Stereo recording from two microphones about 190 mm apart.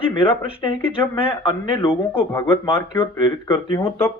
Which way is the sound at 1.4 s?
25° left (ahead or behind).